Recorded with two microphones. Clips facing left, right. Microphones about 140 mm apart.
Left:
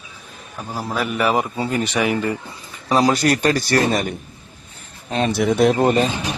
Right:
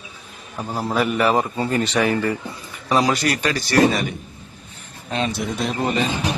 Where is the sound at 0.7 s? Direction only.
Centre (ahead or behind).